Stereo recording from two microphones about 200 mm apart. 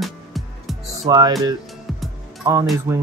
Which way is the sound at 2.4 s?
15° right (ahead or behind).